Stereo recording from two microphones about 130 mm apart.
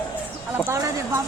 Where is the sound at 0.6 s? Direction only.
20° right (ahead or behind).